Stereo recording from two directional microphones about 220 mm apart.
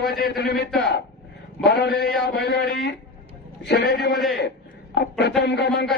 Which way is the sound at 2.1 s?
Centre (ahead or behind).